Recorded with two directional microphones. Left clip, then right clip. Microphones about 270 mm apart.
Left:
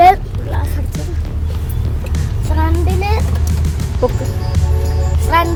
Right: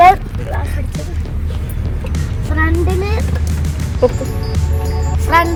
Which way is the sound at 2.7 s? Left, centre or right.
Centre.